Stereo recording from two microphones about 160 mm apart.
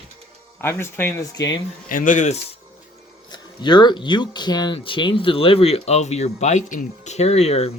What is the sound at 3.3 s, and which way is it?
Speech, 25° left (ahead or behind).